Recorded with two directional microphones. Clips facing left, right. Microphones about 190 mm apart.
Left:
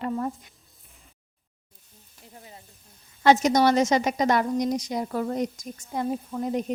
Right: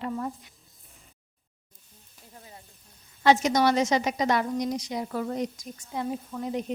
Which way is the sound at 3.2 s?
45° left (ahead or behind).